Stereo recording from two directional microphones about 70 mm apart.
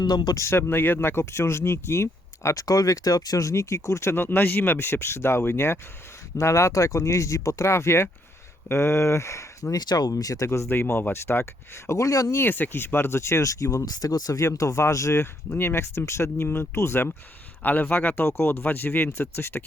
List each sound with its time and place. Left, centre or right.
0.0 s speech: left
0.3 s speech: left
4.1 s speech: left
9.7 s speech: left
10.4 s speech: left
10.7 s speech: left
11.9 s speech: left
12.3 s speech: left
13.8 s speech: left
17.6 s speech: left